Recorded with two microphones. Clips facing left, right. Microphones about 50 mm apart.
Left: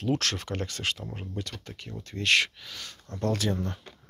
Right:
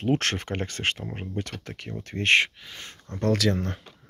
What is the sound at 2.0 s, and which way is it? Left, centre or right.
Speech, right.